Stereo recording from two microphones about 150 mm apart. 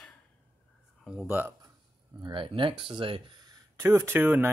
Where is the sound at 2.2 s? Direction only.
35° right (ahead or behind).